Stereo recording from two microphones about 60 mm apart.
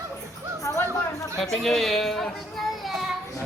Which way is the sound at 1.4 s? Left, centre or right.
Centre.